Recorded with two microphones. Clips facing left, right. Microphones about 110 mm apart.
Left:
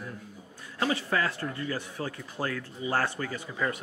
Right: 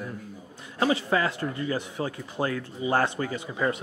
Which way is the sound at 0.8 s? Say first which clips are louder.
Right 4 dB; 20° right (ahead or behind).